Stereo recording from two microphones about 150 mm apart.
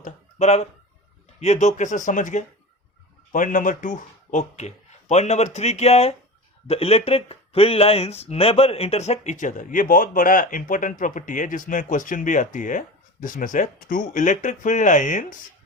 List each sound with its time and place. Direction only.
0.0 s speech: 50° left (ahead or behind)